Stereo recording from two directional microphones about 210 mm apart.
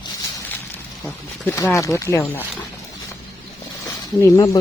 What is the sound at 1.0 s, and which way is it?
Speech, 10° left (ahead or behind).